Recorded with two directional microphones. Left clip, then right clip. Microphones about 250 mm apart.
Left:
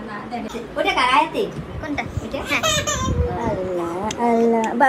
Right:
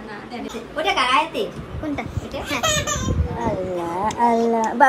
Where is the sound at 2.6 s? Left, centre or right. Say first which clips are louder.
Left 1 dB; centre.